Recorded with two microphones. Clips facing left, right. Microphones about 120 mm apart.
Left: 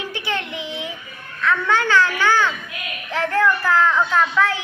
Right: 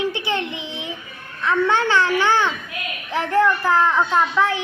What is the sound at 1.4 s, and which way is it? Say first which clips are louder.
A woman's voice: right 1 dB; 20° right (ahead or behind).